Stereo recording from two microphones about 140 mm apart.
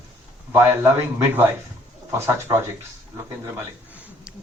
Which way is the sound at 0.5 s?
15° right (ahead or behind).